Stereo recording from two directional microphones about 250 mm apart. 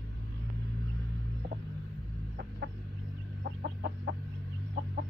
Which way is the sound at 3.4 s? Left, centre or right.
Right.